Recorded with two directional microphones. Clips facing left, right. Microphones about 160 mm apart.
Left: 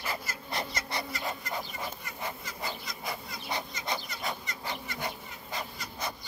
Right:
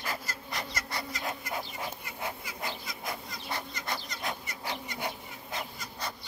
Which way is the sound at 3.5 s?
15° left (ahead or behind).